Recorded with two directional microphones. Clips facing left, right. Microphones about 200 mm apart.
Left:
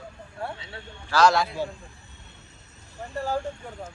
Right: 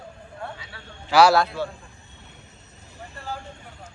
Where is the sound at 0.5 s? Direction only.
25° left (ahead or behind).